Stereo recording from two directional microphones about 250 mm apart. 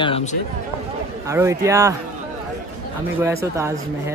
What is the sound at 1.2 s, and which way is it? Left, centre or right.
Speech, centre.